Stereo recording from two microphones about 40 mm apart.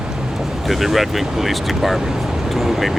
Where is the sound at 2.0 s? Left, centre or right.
Centre.